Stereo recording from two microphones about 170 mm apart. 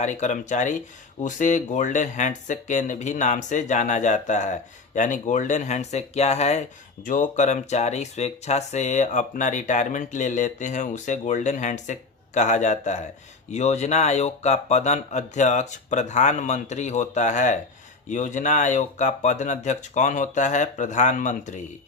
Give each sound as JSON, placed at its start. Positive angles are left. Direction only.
{"t": 0.0, "sound": "speech", "side_deg": 45}